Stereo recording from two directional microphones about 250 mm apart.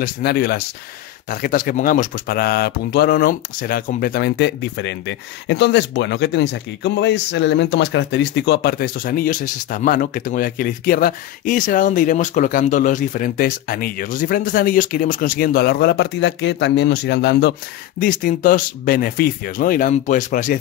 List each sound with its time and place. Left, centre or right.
0.0 s speech: left